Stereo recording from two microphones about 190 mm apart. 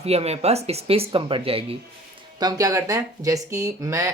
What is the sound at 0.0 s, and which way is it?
Speech, 35° right (ahead or behind).